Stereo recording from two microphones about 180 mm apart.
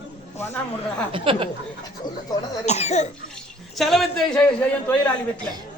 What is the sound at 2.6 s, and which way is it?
Speech, 40° left (ahead or behind).